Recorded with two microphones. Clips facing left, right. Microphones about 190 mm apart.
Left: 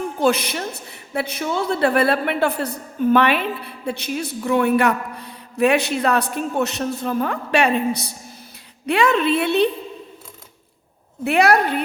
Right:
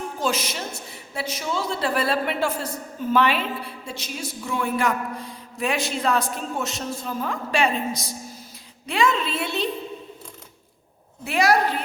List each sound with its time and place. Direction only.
0.2 s a woman's voice: 60° left (ahead or behind)
11.2 s a woman's voice: 60° left (ahead or behind)